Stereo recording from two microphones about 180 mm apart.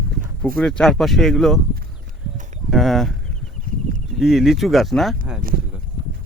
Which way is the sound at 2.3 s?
45° right (ahead or behind).